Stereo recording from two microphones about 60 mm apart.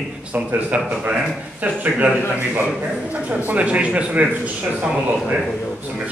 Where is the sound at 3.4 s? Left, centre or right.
Right.